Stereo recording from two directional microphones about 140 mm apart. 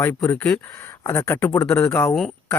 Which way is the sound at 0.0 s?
15° left (ahead or behind).